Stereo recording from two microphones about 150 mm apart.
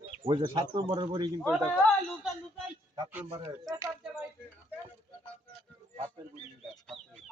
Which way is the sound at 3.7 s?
20° right (ahead or behind).